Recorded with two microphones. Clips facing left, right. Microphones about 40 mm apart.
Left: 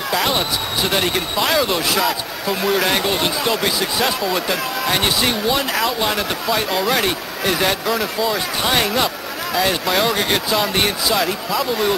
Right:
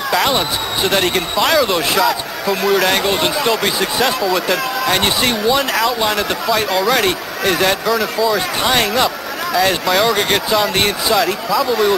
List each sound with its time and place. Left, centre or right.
0.1 s speech: centre
7.8 s speech: centre